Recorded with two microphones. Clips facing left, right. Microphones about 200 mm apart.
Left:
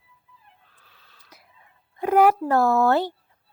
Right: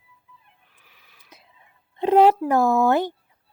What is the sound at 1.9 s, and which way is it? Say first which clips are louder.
Speech: right 2 dB; 25° right (ahead or behind).